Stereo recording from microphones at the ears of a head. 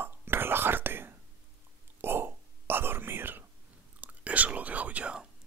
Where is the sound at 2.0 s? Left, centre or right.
Right.